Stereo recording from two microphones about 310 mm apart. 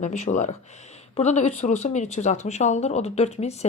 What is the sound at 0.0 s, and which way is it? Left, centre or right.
Speech, left.